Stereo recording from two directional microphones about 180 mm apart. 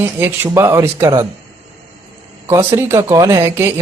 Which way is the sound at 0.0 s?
10° right (ahead or behind).